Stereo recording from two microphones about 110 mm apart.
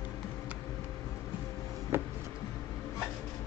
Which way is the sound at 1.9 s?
20° right (ahead or behind).